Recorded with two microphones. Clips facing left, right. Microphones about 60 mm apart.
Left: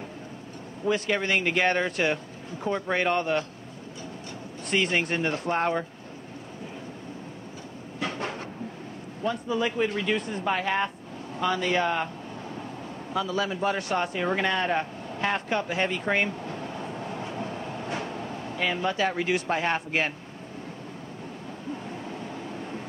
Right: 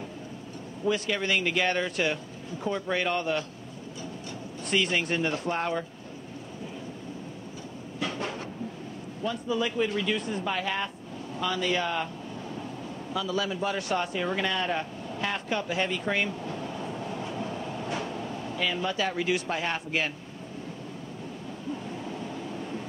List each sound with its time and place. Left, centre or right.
0.8 s speech: left
4.6 s speech: left
8.0 s train: left
9.2 s a man's voice: left
21.8 s vehicle: left